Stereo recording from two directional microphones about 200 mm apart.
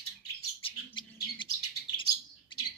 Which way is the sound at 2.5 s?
25° left (ahead or behind).